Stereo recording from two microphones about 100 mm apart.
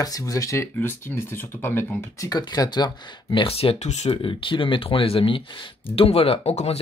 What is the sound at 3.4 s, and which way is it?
Speech, 75° left (ahead or behind).